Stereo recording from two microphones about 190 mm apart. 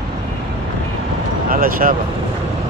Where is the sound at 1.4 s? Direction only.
50° right (ahead or behind).